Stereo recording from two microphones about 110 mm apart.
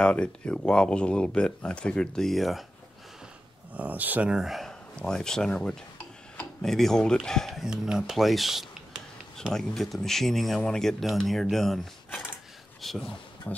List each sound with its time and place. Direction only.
0.0 s speech: 10° left (ahead or behind)
3.7 s speech: 15° right (ahead or behind); by 13.1 s centre (ahead or behind)
13.5 s speech: 20° left (ahead or behind)